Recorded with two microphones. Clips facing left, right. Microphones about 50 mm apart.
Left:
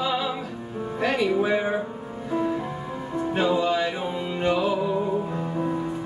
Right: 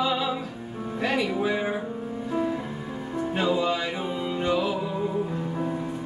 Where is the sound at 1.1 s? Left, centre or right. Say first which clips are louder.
Left 3 dB; left.